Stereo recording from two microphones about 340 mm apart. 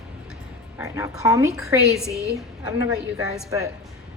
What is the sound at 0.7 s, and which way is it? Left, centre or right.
A woman's voice, centre.